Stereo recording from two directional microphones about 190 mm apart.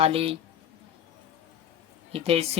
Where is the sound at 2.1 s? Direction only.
30° right (ahead or behind).